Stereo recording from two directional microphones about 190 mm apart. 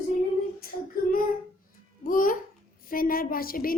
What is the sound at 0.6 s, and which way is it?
Speech, 50° left (ahead or behind).